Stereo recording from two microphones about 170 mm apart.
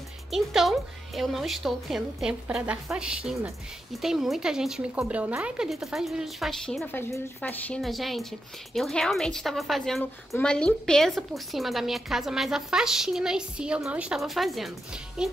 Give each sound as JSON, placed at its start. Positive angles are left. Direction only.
{"t": 0.3, "sound": "a woman's voice", "side_deg": 0}